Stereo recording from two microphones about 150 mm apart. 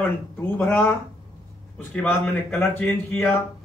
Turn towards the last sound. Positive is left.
turn(degrees=10)  # may be behind; listen again after turning